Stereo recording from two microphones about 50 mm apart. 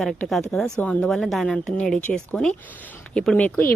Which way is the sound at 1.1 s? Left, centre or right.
Centre.